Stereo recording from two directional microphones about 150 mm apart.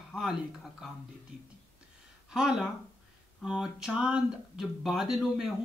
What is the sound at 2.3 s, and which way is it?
Speech, 5° right (ahead or behind).